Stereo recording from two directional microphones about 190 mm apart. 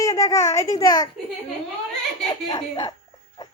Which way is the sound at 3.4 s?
20° left (ahead or behind).